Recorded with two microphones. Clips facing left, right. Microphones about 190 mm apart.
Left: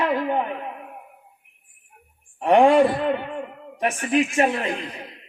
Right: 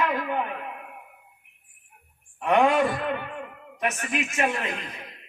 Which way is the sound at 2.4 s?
35° left (ahead or behind).